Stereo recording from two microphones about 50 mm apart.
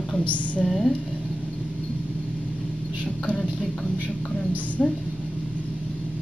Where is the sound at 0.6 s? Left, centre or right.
Centre.